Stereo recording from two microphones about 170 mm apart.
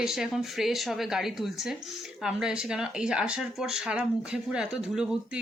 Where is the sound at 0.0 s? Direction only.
5° right (ahead or behind).